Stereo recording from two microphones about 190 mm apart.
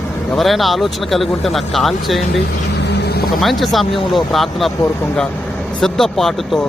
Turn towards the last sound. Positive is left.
turn(degrees=0)  # may be behind; listen again after turning